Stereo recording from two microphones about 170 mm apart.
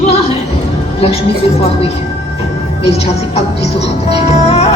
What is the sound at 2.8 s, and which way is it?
Music, 35° left (ahead or behind).